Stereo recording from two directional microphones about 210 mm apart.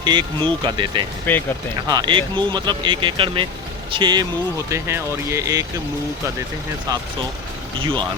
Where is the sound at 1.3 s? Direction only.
10° left (ahead or behind).